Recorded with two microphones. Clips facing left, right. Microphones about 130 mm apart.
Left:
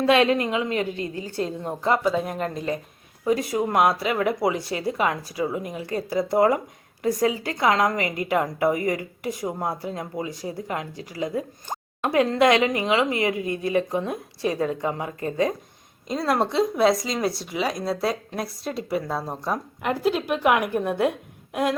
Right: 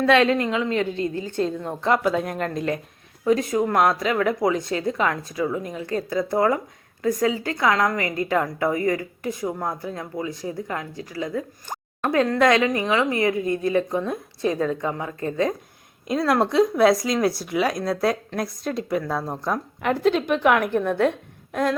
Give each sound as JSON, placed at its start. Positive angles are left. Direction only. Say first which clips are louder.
{"t": 0.0, "sound": "a woman's voice", "louder": "right 1 dB", "side_deg": 15}
{"t": 13.4, "sound": "a woman's voice", "louder": "right 3 dB", "side_deg": -40}
{"t": 13.7, "sound": "speech", "louder": "right 1 dB", "side_deg": 15}
{"t": 16.0, "sound": "a woman's voice", "louder": "right 3 dB", "side_deg": 0}